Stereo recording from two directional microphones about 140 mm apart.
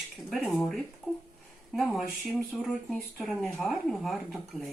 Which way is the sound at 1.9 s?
Centre (ahead or behind).